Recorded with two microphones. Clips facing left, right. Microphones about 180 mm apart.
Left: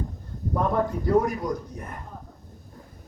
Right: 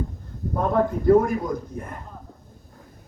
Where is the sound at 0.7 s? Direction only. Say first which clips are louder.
Right 6 dB; 50° right (ahead or behind).